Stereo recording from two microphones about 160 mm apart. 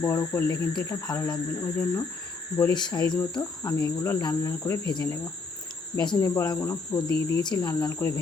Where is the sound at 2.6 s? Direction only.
25° left (ahead or behind).